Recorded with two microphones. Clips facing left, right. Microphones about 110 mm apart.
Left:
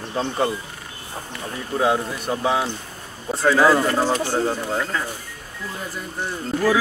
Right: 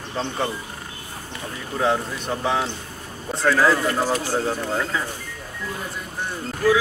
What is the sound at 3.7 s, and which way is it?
Speech, 25° left (ahead or behind).